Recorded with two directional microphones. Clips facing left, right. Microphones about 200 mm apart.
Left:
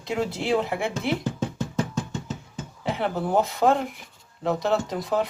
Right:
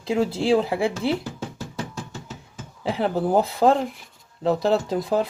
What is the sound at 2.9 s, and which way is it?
Speech, 35° right (ahead or behind).